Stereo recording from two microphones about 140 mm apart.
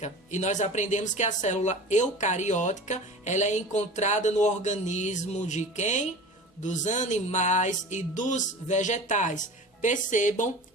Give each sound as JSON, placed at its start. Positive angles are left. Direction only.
{"t": 0.0, "sound": "speech", "side_deg": 55}